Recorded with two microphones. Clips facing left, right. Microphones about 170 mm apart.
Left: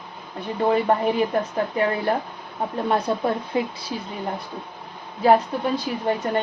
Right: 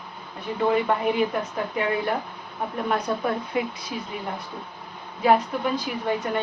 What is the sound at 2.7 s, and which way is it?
A woman's voice, 30° left (ahead or behind).